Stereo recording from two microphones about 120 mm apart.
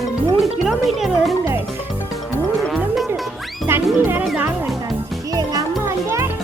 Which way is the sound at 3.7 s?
20° right (ahead or behind).